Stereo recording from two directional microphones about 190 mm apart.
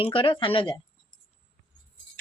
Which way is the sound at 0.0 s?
30° left (ahead or behind).